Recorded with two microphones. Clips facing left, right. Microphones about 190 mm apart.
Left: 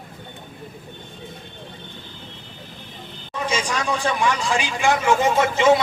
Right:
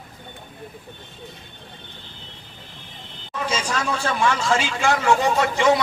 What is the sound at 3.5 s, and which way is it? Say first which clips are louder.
A man's voice: left 1 dB; 15° left (ahead or behind).